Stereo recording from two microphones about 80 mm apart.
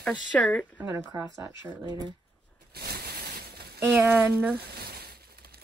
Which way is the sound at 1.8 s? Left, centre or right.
Right.